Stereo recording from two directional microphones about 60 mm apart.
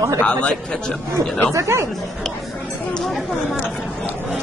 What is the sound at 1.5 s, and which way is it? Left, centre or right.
Speech, right.